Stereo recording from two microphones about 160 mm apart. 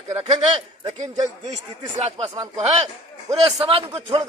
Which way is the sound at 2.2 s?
25° right (ahead or behind).